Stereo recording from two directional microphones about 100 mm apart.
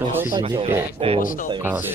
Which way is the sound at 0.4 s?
70° right (ahead or behind).